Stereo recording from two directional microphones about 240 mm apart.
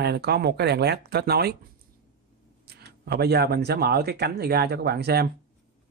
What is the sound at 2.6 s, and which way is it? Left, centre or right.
Speech, right.